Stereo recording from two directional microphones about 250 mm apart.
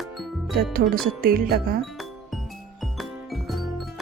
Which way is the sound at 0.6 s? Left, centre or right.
Right.